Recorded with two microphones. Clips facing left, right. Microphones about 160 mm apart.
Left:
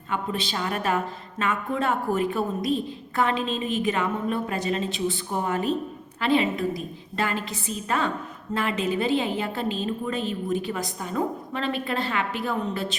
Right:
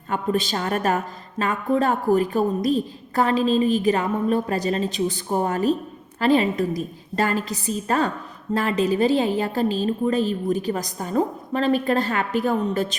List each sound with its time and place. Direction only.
0.1 s a woman's voice: 45° right (ahead or behind)